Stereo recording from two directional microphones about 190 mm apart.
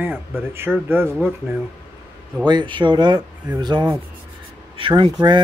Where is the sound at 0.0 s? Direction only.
10° right (ahead or behind).